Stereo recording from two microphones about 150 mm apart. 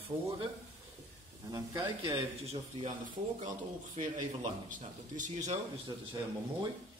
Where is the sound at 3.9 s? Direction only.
55° right (ahead or behind).